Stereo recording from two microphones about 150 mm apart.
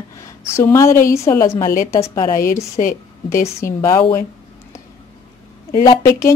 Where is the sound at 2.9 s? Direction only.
20° left (ahead or behind).